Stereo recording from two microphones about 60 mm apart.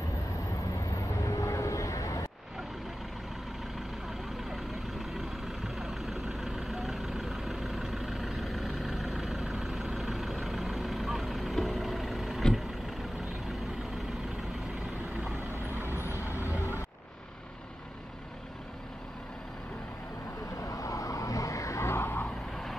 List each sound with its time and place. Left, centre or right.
0.7 s vehicle: left
4.5 s vehicle: centre
15.5 s vehicle: right
15.9 s vehicle: left
20.5 s vehicle: left